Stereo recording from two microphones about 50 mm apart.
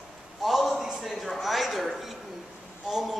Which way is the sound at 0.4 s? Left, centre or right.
Centre.